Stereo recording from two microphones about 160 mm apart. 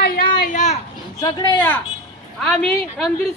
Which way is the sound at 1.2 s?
30° left (ahead or behind).